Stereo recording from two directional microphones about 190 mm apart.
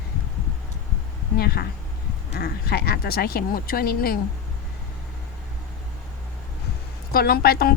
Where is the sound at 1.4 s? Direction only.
55° left (ahead or behind).